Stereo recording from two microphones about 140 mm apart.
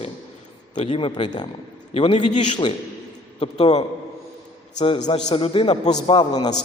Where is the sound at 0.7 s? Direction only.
40° left (ahead or behind).